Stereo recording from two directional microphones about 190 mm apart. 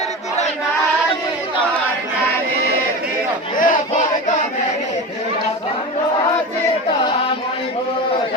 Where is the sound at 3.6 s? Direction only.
45° left (ahead or behind).